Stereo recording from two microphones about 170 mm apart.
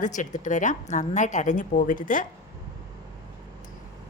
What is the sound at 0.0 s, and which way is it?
A woman's voice, 45° left (ahead or behind).